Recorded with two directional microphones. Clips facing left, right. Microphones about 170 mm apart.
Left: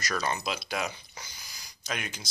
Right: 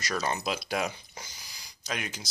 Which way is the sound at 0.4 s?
45° right (ahead or behind).